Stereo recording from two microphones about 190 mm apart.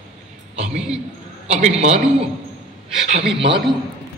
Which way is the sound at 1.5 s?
35° right (ahead or behind).